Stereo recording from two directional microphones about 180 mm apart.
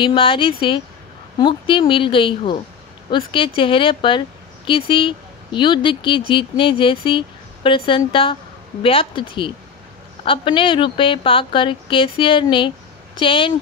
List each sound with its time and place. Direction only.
0.0 s speech: 30° left (ahead or behind)